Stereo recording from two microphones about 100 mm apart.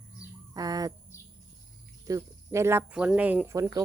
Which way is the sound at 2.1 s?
30° right (ahead or behind).